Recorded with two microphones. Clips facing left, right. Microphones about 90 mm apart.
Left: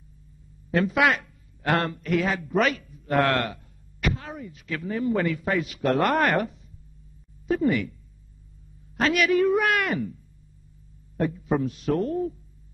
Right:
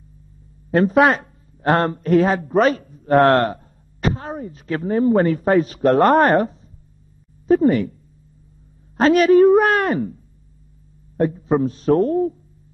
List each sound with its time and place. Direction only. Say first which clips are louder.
0.7 s a woman's voice: right 7 dB; 35° right (ahead or behind)
8.9 s a woman's voice: right 9 dB; 35° right (ahead or behind)